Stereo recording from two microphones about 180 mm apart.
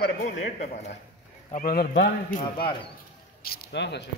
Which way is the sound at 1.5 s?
50° left (ahead or behind).